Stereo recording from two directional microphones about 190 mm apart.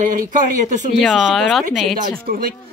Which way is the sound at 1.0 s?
Centre (ahead or behind).